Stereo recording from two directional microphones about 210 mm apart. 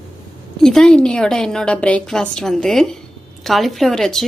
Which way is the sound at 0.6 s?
Centre (ahead or behind).